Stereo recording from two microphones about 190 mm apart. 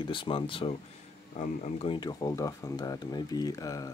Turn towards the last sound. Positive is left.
turn(degrees=20)  # may be behind; listen again after turning